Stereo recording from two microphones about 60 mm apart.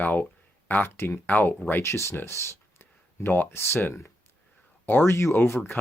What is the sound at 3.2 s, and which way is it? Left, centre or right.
Speech, left.